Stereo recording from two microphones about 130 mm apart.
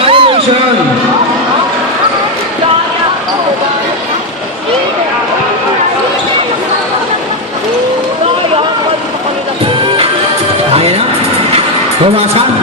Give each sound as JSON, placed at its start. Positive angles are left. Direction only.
{"t": 0.0, "sound": "heart sounds", "side_deg": -45}
{"t": 10.8, "sound": "music", "side_deg": -50}